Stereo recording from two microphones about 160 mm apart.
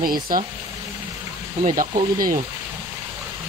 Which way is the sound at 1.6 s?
55° right (ahead or behind).